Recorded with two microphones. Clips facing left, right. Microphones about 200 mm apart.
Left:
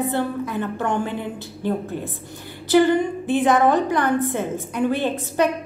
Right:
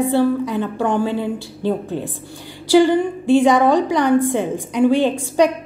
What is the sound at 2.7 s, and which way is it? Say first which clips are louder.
A woman's voice: right 3 dB; 10° right (ahead or behind).